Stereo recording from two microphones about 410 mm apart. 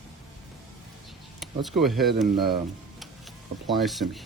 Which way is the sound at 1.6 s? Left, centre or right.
Centre.